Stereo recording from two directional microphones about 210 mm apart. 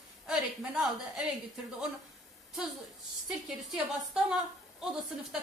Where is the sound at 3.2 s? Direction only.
Centre (ahead or behind).